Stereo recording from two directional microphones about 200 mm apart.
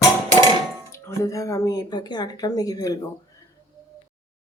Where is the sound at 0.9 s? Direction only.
15° left (ahead or behind).